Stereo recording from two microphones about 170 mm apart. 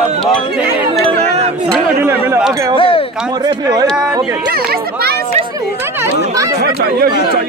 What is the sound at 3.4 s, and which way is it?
Speech, 25° right (ahead or behind).